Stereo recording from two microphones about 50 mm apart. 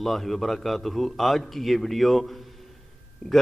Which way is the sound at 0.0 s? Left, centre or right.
Centre.